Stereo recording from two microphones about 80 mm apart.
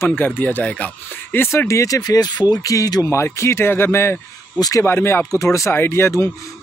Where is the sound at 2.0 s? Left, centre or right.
Left.